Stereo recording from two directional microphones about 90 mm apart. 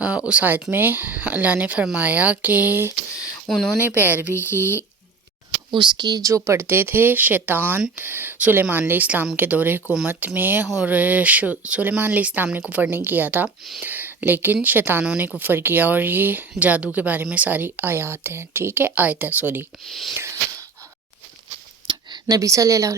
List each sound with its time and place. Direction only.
0.3 s speech: 15° right (ahead or behind)
3.4 s speech: 5° left (ahead or behind)
4.0 s speech: 20° right (ahead or behind)
4.3 s speech: 25° left (ahead or behind)
5.7 s speech: 60° right (ahead or behind); by 15.0 s 20° right (ahead or behind)
15.0 s speech: 10° right (ahead or behind)
19.9 s a sound: centre (ahead or behind)
20.1 s a sound: 30° right (ahead or behind)
21.8 s a sound: 55° right (ahead or behind)
22.4 s speech: 35° right (ahead or behind)